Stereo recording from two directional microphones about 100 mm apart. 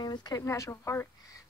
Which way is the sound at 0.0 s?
45° left (ahead or behind).